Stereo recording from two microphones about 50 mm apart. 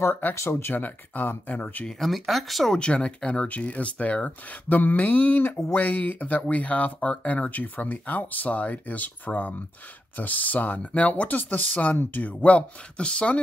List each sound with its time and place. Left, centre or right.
0.3 s speech: left
0.8 s speech: left
1.9 s speech: centre
2.8 s speech: left